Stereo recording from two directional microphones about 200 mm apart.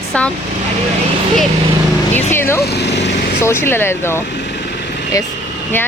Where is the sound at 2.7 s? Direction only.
60° left (ahead or behind).